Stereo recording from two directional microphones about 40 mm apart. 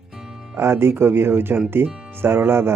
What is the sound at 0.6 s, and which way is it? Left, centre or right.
Speech, right.